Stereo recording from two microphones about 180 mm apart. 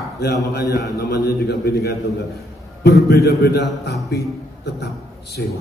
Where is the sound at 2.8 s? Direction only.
65° left (ahead or behind).